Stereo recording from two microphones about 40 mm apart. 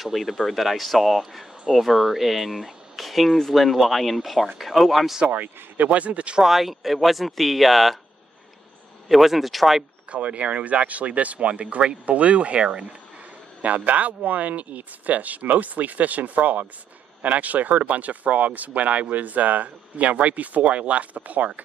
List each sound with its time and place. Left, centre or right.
0.0 s speech: centre
5.2 s speech: right
6.4 s speech: centre
9.1 s speech: centre
10.1 s speech: right
13.6 s speech: right